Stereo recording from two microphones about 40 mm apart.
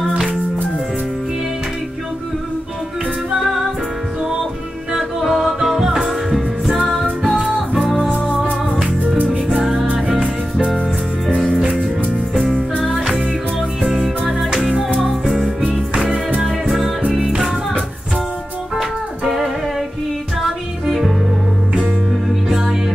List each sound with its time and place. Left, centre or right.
4.9 s music: centre
9.2 s music: right
9.6 s music: centre
11.2 s music: centre
12.8 s music: centre
15.9 s music: right
18.8 s music: centre
20.8 s music: centre
22.5 s music: centre